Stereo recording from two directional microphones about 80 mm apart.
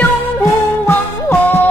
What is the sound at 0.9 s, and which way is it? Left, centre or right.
Music, left.